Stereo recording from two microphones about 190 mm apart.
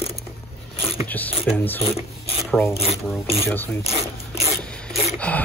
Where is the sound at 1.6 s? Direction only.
10° left (ahead or behind).